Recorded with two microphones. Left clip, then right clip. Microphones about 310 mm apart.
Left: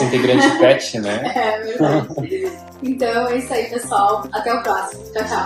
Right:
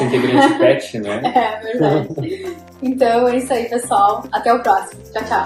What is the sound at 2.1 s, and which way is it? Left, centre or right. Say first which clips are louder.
Speech: left 2 dB; centre.